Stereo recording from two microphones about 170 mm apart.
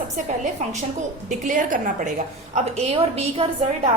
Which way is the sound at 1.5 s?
50° right (ahead or behind).